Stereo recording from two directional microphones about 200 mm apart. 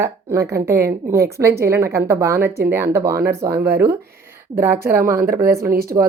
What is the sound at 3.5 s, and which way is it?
Speech, 55° right (ahead or behind).